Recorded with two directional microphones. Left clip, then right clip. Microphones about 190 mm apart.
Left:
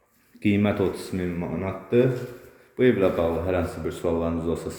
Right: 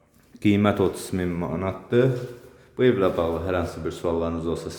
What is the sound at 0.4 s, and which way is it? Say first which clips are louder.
Speech: right 2 dB; 15° right (ahead or behind).